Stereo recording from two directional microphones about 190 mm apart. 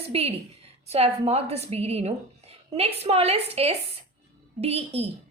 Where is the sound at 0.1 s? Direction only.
30° right (ahead or behind).